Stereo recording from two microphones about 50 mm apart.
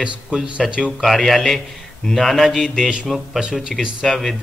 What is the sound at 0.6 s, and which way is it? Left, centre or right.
Speech, right.